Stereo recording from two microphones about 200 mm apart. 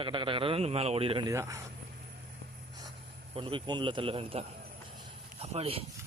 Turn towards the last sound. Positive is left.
turn(degrees=-30)  # may be behind; listen again after turning